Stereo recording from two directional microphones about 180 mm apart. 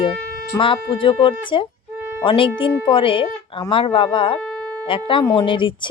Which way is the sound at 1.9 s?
10° right (ahead or behind).